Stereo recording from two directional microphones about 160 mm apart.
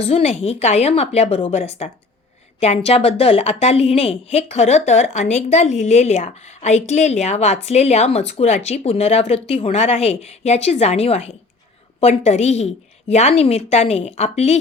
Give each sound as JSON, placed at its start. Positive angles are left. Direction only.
{"t": 0.0, "sound": "a woman's voice", "side_deg": 40}